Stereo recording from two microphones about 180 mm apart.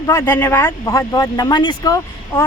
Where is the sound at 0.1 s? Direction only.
15° left (ahead or behind).